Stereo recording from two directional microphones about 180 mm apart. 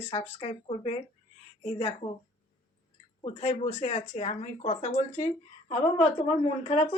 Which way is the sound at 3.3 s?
35° left (ahead or behind).